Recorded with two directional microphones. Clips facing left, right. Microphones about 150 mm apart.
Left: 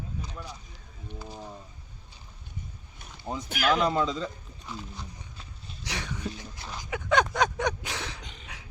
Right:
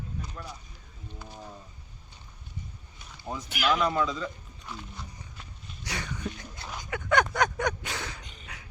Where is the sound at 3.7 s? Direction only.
25° left (ahead or behind).